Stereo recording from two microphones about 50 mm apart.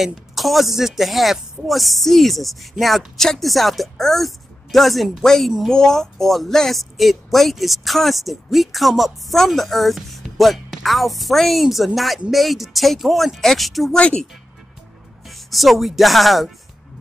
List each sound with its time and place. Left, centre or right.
0.0 s speech: centre
13.9 s speech: left
15.2 s speech: centre